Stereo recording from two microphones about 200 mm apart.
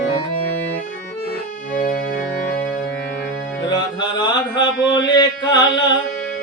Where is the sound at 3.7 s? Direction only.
20° left (ahead or behind).